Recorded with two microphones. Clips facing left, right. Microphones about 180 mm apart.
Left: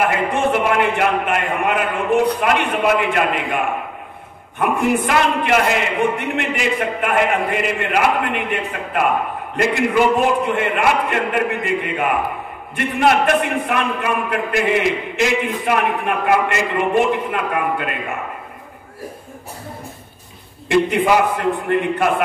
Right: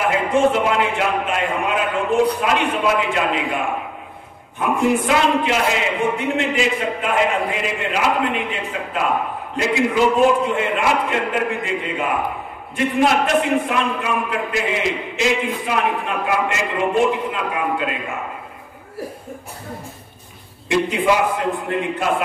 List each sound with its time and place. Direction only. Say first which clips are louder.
0.1 s a man's voice: right 2 dB; 60° left (ahead or behind)
5.0 s a man's voice: right 1 dB; 60° left (ahead or behind)
20.7 s a man's voice: left 3 dB; 55° left (ahead or behind)